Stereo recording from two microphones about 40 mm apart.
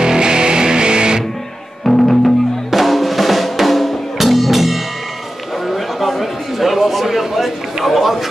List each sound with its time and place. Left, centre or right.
0.0 s music: centre
1.9 s music: centre
5.7 s a sound: centre
7.1 s a man's voice: centre